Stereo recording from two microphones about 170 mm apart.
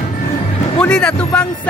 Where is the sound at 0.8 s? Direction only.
5° left (ahead or behind).